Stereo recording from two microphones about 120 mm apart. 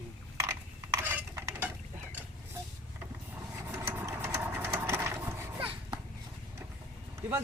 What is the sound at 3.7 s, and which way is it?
Sewing machine, 20° right (ahead or behind).